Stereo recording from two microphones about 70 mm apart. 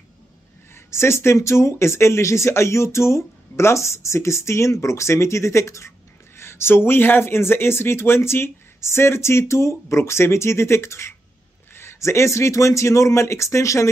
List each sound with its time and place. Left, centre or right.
0.7 s speech: left